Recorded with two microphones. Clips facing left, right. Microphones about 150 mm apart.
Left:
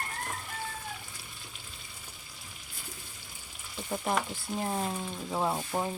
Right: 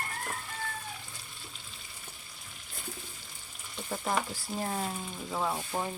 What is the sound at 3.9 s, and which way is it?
Frying, 10° left (ahead or behind).